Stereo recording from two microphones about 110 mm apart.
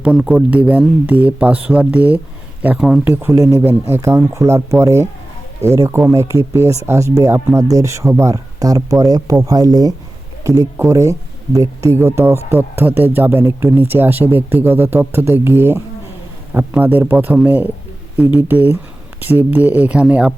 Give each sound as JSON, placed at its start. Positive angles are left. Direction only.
{"t": 0.0, "sound": "speech", "side_deg": -10}
{"t": 3.0, "sound": "speech", "side_deg": -20}